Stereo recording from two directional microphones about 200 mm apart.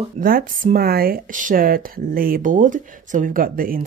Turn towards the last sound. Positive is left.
turn(degrees=-45)  # may be behind; listen again after turning